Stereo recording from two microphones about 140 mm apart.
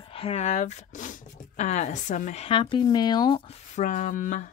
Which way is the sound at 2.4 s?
35° left (ahead or behind).